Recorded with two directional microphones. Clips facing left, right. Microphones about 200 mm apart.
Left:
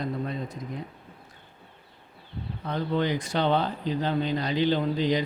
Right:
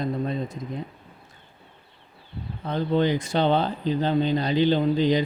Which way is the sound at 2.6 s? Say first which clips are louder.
Right 4 dB; 25° right (ahead or behind).